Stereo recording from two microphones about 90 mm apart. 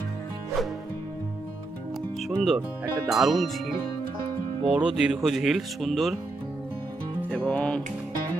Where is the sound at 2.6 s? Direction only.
25° right (ahead or behind).